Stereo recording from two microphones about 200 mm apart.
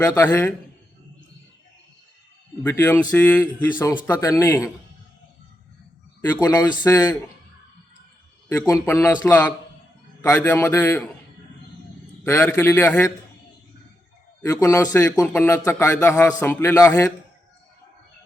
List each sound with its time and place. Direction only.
0.0 s a man's voice: 10° left (ahead or behind)
2.6 s a man's voice: 10° left (ahead or behind)
6.2 s a man's voice: 15° left (ahead or behind)
8.4 s a man's voice: 10° left (ahead or behind)
12.2 s a man's voice: 10° left (ahead or behind)
14.4 s a man's voice: 15° left (ahead or behind)